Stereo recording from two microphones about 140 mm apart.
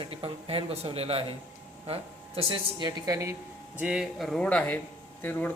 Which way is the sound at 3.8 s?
5° right (ahead or behind).